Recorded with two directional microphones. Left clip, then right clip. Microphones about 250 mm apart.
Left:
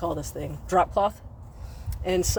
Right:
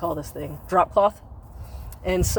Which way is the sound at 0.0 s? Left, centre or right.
Centre.